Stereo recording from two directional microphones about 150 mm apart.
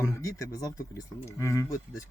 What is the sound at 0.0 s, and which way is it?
Speech, 20° left (ahead or behind).